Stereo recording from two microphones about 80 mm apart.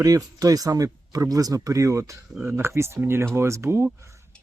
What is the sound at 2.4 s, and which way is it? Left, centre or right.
Speech, right.